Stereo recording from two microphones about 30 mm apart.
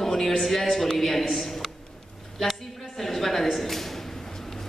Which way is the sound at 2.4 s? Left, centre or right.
Centre.